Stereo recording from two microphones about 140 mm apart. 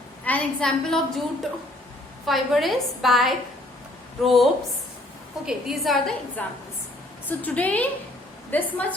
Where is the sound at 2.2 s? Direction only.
Centre (ahead or behind).